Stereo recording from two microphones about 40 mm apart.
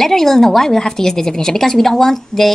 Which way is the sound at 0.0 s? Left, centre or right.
Centre.